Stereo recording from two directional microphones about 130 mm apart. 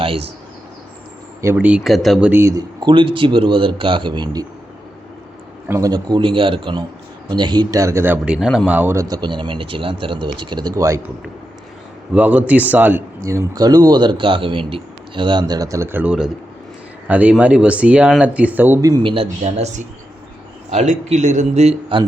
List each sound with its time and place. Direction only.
0.0 s speech: 45° right (ahead or behind)
1.5 s speech: 10° right (ahead or behind)
2.4 s speech: 25° right (ahead or behind)
5.6 s a man's voice: 20° right (ahead or behind)
5.9 s speech: 35° right (ahead or behind); by 9.0 s 15° right (ahead or behind)
9.0 s speech: 30° right (ahead or behind)
12.1 s speech: 10° right (ahead or behind)
13.2 s speech: 25° right (ahead or behind)
18.8 s speech: 30° right (ahead or behind)
19.0 s a man's voice: 45° right (ahead or behind)